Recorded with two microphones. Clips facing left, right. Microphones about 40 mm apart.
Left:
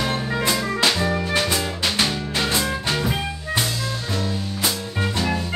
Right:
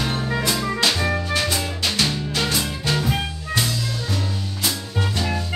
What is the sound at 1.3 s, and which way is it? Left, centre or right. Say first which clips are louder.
Music: left 1 dB; left.